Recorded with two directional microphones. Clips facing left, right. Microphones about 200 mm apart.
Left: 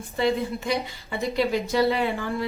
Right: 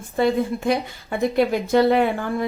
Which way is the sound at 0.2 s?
55° right (ahead or behind).